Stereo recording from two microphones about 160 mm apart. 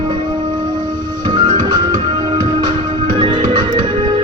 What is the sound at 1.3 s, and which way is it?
Music, 30° right (ahead or behind).